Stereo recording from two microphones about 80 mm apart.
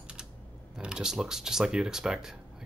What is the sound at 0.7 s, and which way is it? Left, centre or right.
Speech, centre.